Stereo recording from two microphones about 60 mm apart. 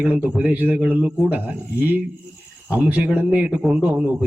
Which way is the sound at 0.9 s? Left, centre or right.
Right.